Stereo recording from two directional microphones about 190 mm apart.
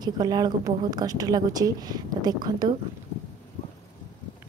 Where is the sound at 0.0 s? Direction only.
20° right (ahead or behind).